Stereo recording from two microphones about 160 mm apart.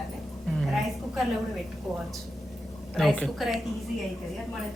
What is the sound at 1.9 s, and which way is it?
Speech, centre (ahead or behind).